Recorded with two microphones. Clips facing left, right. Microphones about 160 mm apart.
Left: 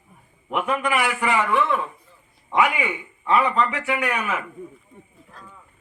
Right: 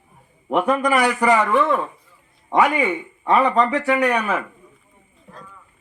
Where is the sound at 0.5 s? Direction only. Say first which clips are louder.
Right 5 dB; 40° right (ahead or behind).